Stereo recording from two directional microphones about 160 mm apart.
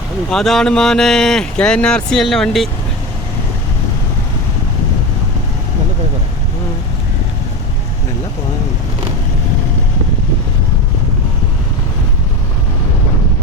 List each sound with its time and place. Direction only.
0.3 s speech: 5° left (ahead or behind)